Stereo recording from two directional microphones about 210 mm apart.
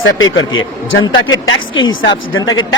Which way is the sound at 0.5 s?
70° left (ahead or behind).